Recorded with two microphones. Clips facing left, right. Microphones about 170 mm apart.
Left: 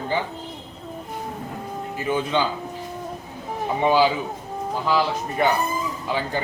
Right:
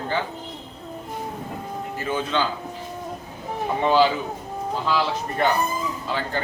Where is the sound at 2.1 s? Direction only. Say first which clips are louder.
Left 2 dB; 15° left (ahead or behind).